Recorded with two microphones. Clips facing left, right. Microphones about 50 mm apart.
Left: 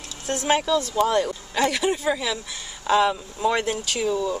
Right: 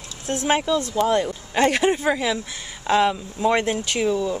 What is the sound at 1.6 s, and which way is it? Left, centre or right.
Speech, right.